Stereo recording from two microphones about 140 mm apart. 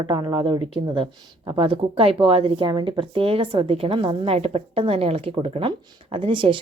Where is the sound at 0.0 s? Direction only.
30° right (ahead or behind).